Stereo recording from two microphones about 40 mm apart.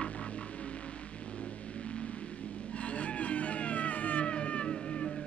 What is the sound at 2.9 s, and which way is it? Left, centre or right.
Music, left.